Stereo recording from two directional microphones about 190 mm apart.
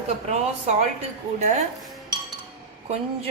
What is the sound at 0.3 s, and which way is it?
Speech, 35° right (ahead or behind).